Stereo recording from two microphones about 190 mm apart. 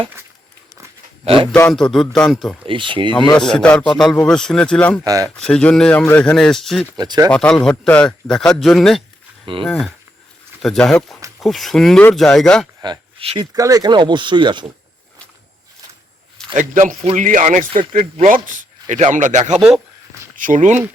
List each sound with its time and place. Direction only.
1.2 s a man's voice: 30° right (ahead or behind)
1.5 s a man's voice: 5° left (ahead or behind)
2.6 s speech: 25° right (ahead or behind)
3.3 s a man's voice: 5° left (ahead or behind)
6.9 s speech: 20° right (ahead or behind)
7.3 s a man's voice: 5° left (ahead or behind)
12.8 s speech: 25° right (ahead or behind)
16.6 s a man's voice: 45° right (ahead or behind)
19.5 s a man's voice: centre (ahead or behind)
20.3 s speech: 45° right (ahead or behind)